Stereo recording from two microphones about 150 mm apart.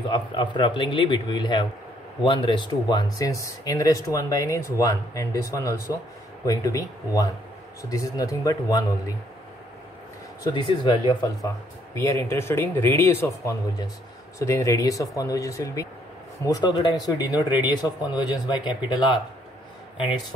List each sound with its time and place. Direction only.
0.1 s a man's voice: 30° left (ahead or behind)
10.4 s a man's voice: 30° left (ahead or behind)
11.4 s a man's voice: 20° left (ahead or behind)